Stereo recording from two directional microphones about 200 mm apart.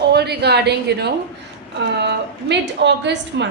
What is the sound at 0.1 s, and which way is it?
A woman's voice, 55° right (ahead or behind).